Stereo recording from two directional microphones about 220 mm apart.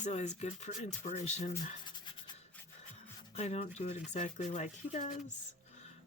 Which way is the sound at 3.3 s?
30° left (ahead or behind).